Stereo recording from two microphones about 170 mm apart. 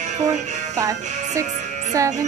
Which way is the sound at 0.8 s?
20° right (ahead or behind).